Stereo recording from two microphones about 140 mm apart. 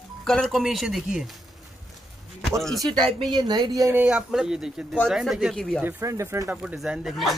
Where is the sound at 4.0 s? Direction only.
10° right (ahead or behind).